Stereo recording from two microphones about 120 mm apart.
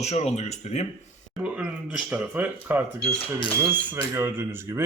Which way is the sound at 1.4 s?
5° right (ahead or behind).